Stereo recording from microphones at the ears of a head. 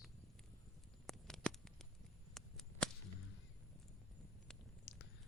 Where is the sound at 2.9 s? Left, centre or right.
Left.